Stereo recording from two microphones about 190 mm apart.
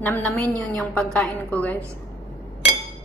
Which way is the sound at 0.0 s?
10° left (ahead or behind).